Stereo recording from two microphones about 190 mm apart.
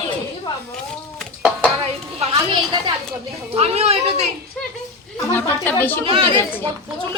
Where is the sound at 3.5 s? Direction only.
35° right (ahead or behind).